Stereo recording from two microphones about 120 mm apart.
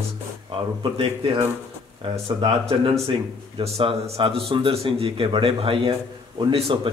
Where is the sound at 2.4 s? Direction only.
50° right (ahead or behind).